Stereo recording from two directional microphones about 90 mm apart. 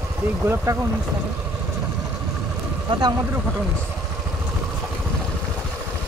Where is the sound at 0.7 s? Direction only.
40° right (ahead or behind).